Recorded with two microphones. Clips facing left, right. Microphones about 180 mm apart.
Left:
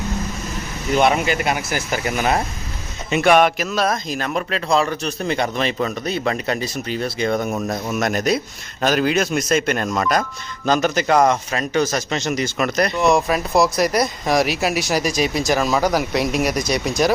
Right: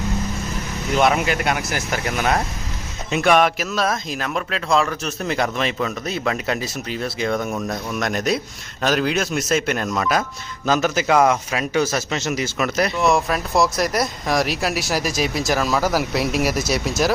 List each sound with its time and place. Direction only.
0.9 s speech: centre (ahead or behind)
7.5 s speech: 20° left (ahead or behind)
7.9 s speech: centre (ahead or behind)